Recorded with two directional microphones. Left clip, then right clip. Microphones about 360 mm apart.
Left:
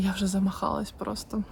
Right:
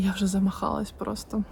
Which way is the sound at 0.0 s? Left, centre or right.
Centre.